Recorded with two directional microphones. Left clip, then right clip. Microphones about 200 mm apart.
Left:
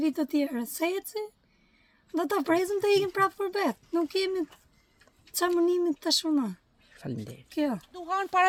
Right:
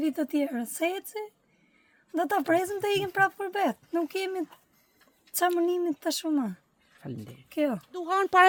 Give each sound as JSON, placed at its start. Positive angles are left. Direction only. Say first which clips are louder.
{"t": 0.0, "sound": "speech", "louder": "even", "side_deg": -10}
{"t": 7.0, "sound": "speech", "louder": "left 3 dB", "side_deg": 50}
{"t": 7.5, "sound": "speech", "louder": "right 2 dB", "side_deg": -10}
{"t": 7.9, "sound": "speech", "louder": "right 4 dB", "side_deg": -60}